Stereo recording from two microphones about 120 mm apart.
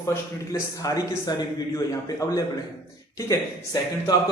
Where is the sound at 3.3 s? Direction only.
30° left (ahead or behind).